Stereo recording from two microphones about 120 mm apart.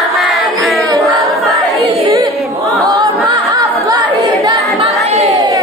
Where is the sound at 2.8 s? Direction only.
30° right (ahead or behind).